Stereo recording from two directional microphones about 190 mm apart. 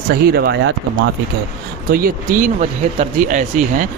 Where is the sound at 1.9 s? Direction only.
50° right (ahead or behind).